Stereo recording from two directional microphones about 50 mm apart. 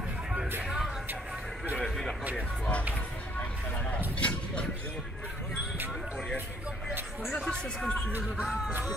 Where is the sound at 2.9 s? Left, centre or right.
Left.